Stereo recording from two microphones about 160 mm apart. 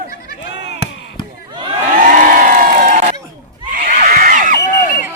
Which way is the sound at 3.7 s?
50° right (ahead or behind).